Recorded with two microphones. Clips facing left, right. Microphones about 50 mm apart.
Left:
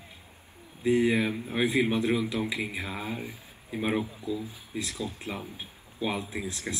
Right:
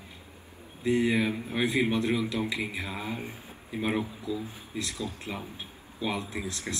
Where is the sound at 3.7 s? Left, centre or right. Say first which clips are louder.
Left 1 dB; centre.